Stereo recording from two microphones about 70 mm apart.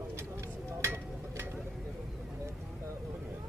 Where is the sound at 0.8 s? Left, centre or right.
Right.